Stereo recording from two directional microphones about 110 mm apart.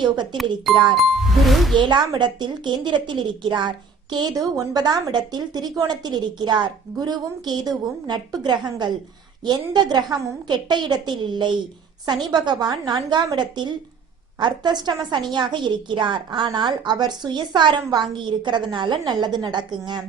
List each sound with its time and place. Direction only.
0.7 s a woman's voice: 45° right (ahead or behind)
1.5 s speech: centre (ahead or behind)
1.8 s a woman's voice: 45° right (ahead or behind)